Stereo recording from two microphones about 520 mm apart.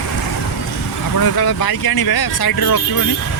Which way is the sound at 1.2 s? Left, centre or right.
Left.